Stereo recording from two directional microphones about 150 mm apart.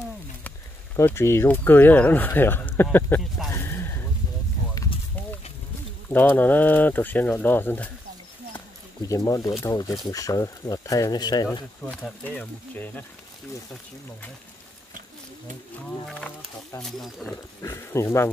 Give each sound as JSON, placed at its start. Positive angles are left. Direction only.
{"t": 0.9, "sound": "speech", "side_deg": 15}
{"t": 3.5, "sound": "a sound", "side_deg": 15}
{"t": 6.0, "sound": "speech", "side_deg": 10}
{"t": 8.5, "sound": "a sound", "side_deg": 20}
{"t": 9.6, "sound": "speech", "side_deg": 20}
{"t": 11.8, "sound": "speech", "side_deg": 5}
{"t": 16.1, "sound": "speech", "side_deg": 5}
{"t": 17.6, "sound": "speech", "side_deg": 20}